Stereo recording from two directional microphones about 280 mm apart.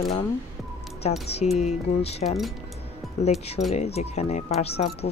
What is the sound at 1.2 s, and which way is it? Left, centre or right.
Speech, left.